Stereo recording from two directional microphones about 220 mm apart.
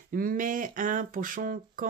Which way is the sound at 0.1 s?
40° right (ahead or behind).